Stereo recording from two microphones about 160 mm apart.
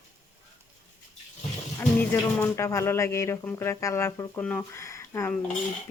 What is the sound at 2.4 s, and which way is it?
Speech, 15° left (ahead or behind).